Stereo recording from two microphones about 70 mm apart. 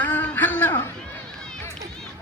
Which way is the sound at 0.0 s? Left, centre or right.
Left.